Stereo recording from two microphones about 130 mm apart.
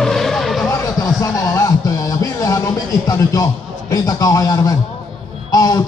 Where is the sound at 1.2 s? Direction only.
25° left (ahead or behind).